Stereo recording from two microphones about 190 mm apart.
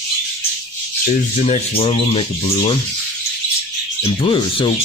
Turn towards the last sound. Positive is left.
turn(degrees=25)  # may be behind; listen again after turning